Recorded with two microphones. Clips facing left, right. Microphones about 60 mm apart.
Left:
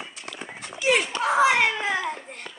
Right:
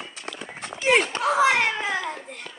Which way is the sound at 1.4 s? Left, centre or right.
Centre.